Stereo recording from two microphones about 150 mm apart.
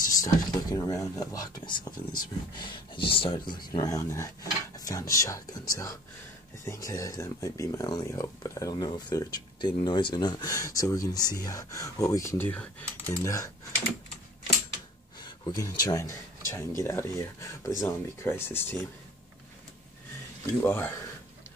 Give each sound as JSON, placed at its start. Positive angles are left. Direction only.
{"t": 0.1, "sound": "speech", "side_deg": 25}
{"t": 15.1, "sound": "speech", "side_deg": 30}
{"t": 20.6, "sound": "speech", "side_deg": 15}